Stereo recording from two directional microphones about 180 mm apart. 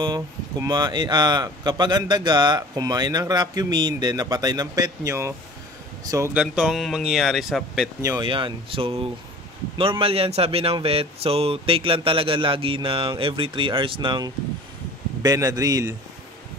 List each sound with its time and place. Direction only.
0.0 s speech: 25° right (ahead or behind)
6.3 s speech: 5° right (ahead or behind)
8.0 s speech: 20° right (ahead or behind)
8.3 s speech: 30° right (ahead or behind)